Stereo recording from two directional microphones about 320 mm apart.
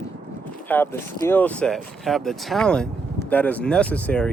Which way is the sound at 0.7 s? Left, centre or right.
Centre.